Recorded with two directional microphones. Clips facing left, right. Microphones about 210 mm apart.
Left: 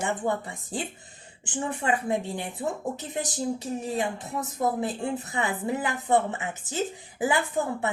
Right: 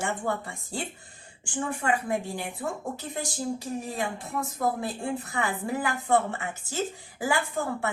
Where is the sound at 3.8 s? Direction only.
20° left (ahead or behind).